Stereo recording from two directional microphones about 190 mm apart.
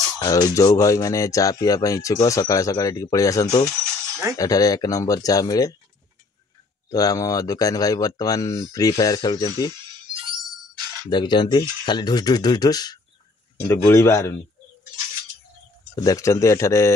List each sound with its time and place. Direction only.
0.2 s speech: 20° left (ahead or behind)
6.9 s speech: 20° left (ahead or behind)
10.1 s music: 25° right (ahead or behind)
11.1 s speech: 25° left (ahead or behind)
16.0 s speech: 15° left (ahead or behind)